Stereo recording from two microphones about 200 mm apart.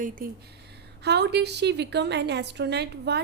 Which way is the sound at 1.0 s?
55° right (ahead or behind).